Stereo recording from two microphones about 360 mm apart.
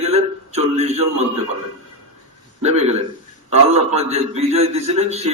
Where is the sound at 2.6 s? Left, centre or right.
Centre.